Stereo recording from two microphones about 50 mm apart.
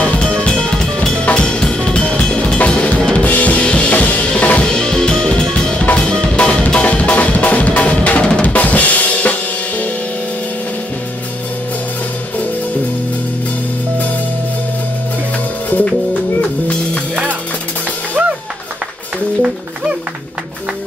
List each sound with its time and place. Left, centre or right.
0.0 s drum kit: centre
5.5 s drum: left
5.9 s music: centre
8.5 s drum kit: left
16.1 s music: left